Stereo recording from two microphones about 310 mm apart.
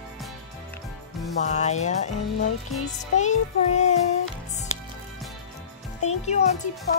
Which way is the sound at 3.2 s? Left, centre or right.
Left.